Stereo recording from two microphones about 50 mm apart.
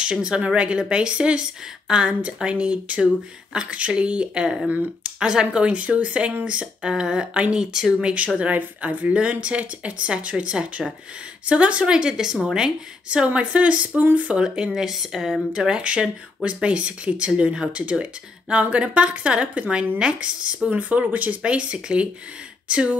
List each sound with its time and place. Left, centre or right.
0.0 s speech: centre
8.4 s a woman's voice: right
9.1 s speech: right
14.7 s speech: centre
15.5 s speech: centre
20.7 s speech: right